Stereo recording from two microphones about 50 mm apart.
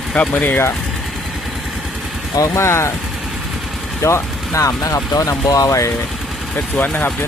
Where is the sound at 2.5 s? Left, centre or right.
Left.